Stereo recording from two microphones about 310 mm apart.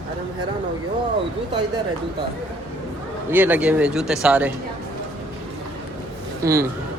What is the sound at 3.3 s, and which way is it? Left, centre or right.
Speech, centre.